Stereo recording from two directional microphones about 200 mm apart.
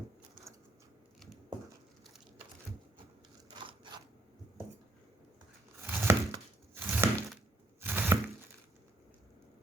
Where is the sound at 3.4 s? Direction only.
20° right (ahead or behind).